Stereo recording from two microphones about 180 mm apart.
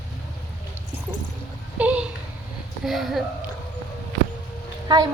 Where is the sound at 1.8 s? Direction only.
10° right (ahead or behind).